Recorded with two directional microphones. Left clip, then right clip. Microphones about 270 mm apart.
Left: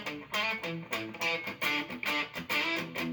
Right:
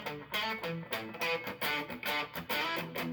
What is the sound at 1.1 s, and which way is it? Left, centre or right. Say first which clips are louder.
Music: left 1 dB; right.